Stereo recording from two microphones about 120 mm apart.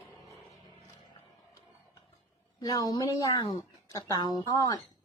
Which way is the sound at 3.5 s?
40° left (ahead or behind).